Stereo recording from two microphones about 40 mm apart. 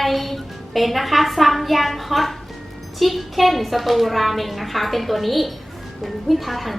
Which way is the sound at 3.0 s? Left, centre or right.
Centre.